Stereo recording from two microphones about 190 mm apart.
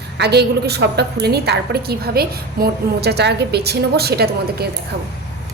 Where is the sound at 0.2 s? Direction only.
60° right (ahead or behind).